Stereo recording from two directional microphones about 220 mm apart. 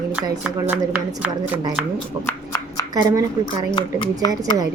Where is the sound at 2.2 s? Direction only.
10° left (ahead or behind).